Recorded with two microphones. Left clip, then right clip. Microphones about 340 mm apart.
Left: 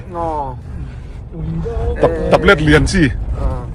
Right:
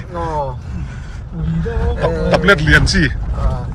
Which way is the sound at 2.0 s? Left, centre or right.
Centre.